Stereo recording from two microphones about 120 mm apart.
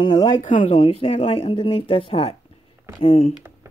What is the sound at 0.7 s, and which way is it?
Speech, 55° left (ahead or behind).